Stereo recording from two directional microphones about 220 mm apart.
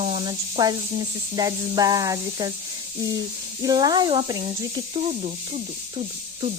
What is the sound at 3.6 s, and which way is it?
Speech, 15° right (ahead or behind).